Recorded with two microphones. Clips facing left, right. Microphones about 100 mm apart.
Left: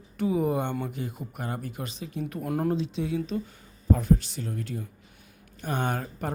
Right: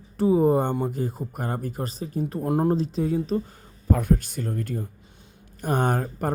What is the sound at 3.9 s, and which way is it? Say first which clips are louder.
A man's voice: right 1 dB; 55° right (ahead or behind).